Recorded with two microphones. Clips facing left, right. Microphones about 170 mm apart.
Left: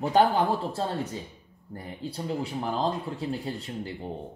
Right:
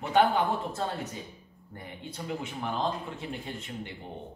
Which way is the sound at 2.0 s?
35° left (ahead or behind).